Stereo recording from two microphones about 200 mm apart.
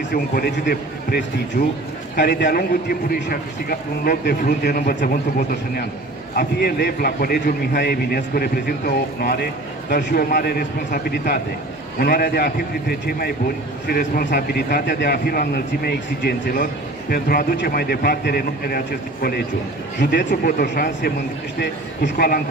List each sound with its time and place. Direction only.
0.1 s a man's voice: 45° left (ahead or behind)
6.3 s a man's voice: 50° left (ahead or behind)
13.8 s a man's voice: 45° left (ahead or behind)
20.1 s a man's voice: 45° left (ahead or behind)